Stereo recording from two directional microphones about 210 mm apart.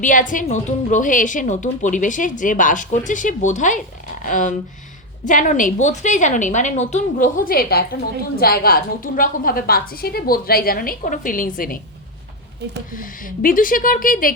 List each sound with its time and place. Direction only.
0.0 s a woman's voice: 40° left (ahead or behind)
12.9 s a woman's voice: 40° left (ahead or behind)